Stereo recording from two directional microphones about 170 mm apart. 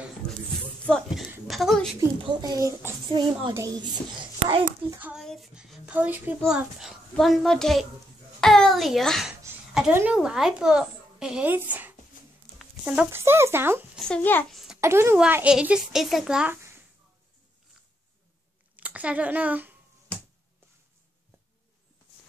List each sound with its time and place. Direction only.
0.8 s a sound: centre (ahead or behind)
2.0 s speech: 20° right (ahead or behind)
4.9 s a woman's voice: 10° right (ahead or behind)
13.9 s a woman's voice: 5° left (ahead or behind)
14.8 s a woman's voice: 15° right (ahead or behind)
18.8 s speech: 10° right (ahead or behind)